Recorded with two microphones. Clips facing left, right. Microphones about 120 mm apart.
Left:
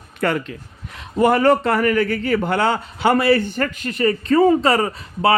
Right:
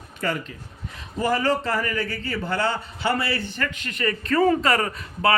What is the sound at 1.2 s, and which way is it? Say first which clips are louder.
A man's voice: left 8 dB; 55° left (ahead or behind).